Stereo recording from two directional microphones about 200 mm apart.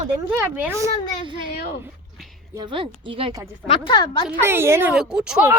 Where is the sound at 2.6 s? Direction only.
25° right (ahead or behind).